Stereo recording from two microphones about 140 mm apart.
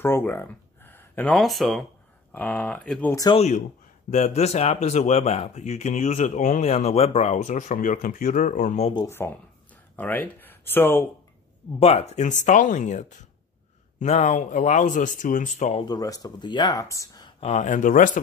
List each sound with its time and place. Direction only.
0.0 s a sound: 15° left (ahead or behind)
1.3 s speech: centre (ahead or behind)
2.3 s speech: 10° left (ahead or behind)
3.3 s speech: 55° left (ahead or behind)
8.9 s speech: 20° left (ahead or behind)
11.8 s speech: 45° left (ahead or behind); by 15.7 s 65° left (ahead or behind)
15.7 s speech: 30° left (ahead or behind)
17.4 s speech: 50° left (ahead or behind); by 18.2 s 70° left (ahead or behind)